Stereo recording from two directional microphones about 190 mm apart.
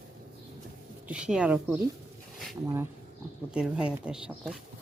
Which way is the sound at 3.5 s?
5° right (ahead or behind).